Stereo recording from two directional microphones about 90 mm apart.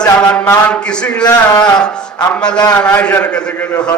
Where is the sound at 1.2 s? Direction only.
50° left (ahead or behind).